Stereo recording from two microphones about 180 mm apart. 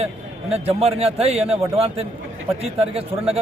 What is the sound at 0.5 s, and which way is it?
A man's voice, 35° right (ahead or behind).